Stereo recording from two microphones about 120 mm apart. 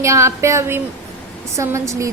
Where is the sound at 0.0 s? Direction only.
25° right (ahead or behind).